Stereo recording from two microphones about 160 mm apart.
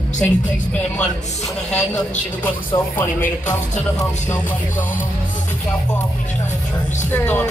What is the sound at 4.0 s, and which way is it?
Music, 20° left (ahead or behind).